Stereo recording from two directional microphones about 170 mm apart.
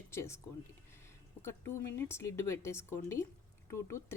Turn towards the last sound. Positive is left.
turn(degrees=15)  # may be behind; listen again after turning